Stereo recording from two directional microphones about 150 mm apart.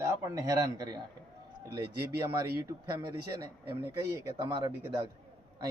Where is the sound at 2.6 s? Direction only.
25° right (ahead or behind).